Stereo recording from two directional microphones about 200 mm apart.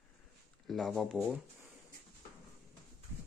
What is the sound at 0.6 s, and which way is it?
Speech, centre (ahead or behind).